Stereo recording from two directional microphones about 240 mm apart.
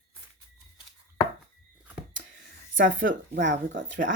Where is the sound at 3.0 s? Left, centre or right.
Right.